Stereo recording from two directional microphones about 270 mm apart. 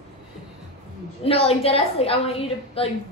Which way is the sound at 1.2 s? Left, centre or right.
Left.